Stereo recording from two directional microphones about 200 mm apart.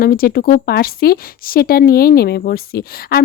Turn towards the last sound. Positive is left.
turn(degrees=50)  # may be behind; listen again after turning